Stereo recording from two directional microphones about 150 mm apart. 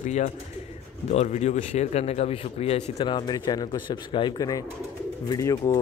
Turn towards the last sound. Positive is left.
turn(degrees=20)  # may be behind; listen again after turning